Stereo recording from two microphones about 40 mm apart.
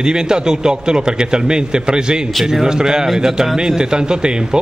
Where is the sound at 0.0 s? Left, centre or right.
Centre.